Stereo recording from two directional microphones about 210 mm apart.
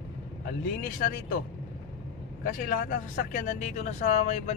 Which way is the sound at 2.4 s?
40° left (ahead or behind).